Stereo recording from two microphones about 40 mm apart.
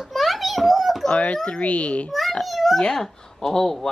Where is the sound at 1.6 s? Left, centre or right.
Left.